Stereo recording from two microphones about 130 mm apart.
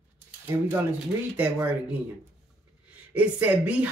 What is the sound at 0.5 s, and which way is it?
Speech, 20° right (ahead or behind).